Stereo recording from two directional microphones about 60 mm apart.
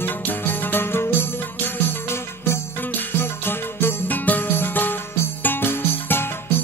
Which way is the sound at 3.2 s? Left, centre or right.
Left.